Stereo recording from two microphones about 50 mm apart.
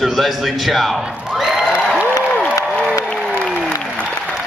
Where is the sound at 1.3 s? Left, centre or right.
Centre.